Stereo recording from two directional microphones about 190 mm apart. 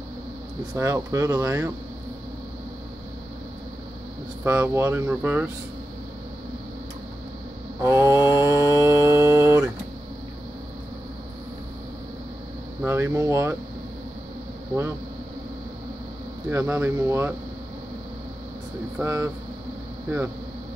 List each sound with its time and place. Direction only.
0.7 s speech: 15° right (ahead or behind)
4.5 s speech: 10° right (ahead or behind)
7.8 s speech: 15° right (ahead or behind)
8.7 s a sound: 15° right (ahead or behind)
12.8 s speech: 15° right (ahead or behind)
16.4 s speech: 10° right (ahead or behind)
18.9 s speech: 10° right (ahead or behind)